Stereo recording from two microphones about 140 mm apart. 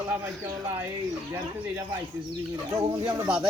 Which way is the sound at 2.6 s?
25° right (ahead or behind).